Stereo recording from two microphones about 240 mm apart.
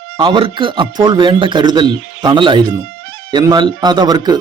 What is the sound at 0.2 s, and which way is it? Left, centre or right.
A man's voice, right.